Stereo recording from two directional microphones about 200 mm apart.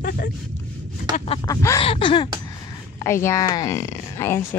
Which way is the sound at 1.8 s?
25° left (ahead or behind).